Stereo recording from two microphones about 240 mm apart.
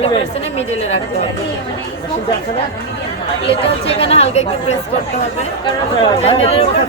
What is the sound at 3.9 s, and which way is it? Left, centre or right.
Speech, left.